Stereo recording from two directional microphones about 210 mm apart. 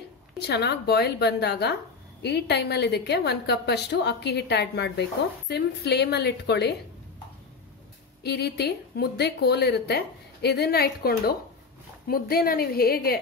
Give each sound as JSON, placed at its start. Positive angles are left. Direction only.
{"t": 0.4, "sound": "a woman's voice", "side_deg": 50}
{"t": 8.2, "sound": "a woman's voice", "side_deg": 50}